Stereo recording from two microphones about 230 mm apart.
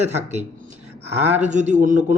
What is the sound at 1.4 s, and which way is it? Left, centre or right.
Speech, right.